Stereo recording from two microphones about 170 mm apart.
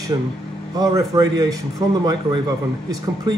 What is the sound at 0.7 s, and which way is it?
Speech, 20° right (ahead or behind).